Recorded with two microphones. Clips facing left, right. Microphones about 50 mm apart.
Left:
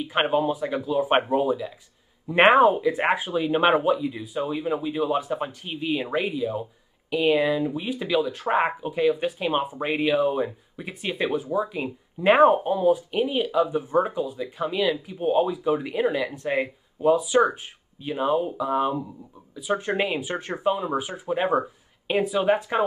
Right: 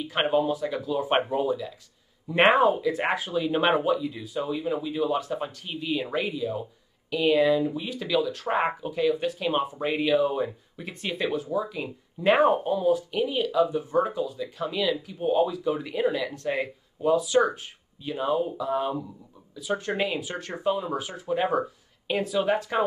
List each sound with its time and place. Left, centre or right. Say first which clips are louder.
0.0 s speech: left 1 dB; centre